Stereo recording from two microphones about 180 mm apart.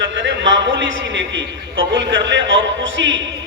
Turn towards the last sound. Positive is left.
turn(degrees=-90)